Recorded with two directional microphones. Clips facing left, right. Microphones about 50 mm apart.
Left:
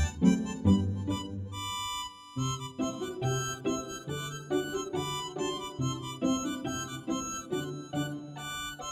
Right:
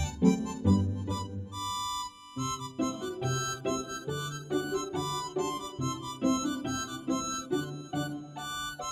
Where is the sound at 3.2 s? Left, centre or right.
Left.